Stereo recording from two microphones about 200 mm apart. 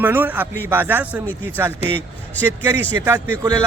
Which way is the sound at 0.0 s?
10° right (ahead or behind).